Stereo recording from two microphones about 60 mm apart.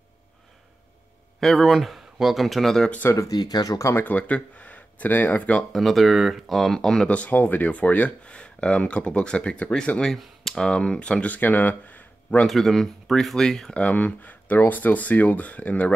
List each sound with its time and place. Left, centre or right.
1.4 s speech: centre
3.1 s speech: left
3.9 s speech: left
5.5 s speech: centre
5.8 s speech: centre
7.1 s speech: left
10.0 s speech: centre
10.7 s speech: centre
12.4 s speech: centre
13.7 s speech: left